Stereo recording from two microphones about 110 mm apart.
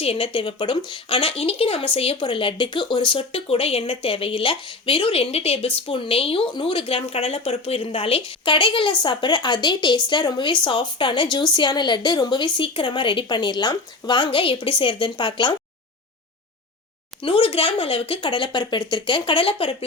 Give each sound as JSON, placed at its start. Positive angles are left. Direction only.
{"t": 0.0, "sound": "speech", "side_deg": 60}
{"t": 0.3, "sound": "speech", "side_deg": 50}
{"t": 17.2, "sound": "speech", "side_deg": 55}